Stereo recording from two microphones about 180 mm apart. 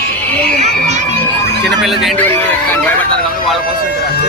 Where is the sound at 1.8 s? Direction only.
Centre (ahead or behind).